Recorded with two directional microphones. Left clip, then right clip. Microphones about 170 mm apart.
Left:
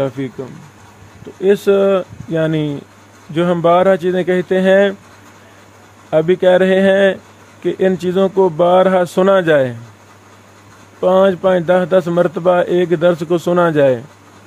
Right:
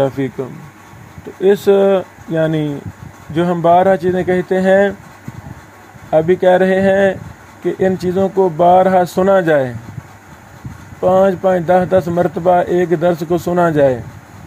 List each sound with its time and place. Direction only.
0.0 s speech: centre (ahead or behind); by 4.9 s 15° left (ahead or behind)
6.0 s speech: 15° left (ahead or behind)
11.0 s speech: 15° left (ahead or behind)